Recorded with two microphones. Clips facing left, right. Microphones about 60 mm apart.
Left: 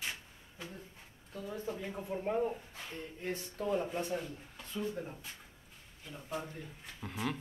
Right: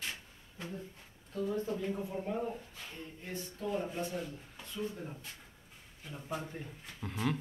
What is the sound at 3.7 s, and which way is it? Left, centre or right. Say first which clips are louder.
Speech: left 2 dB; centre.